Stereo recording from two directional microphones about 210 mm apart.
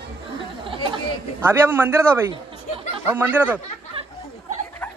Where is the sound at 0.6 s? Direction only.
25° right (ahead or behind).